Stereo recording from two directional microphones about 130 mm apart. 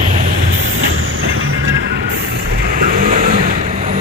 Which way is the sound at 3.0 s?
90° right.